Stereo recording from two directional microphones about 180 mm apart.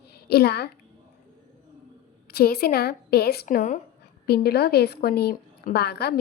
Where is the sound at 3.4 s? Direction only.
45° left (ahead or behind).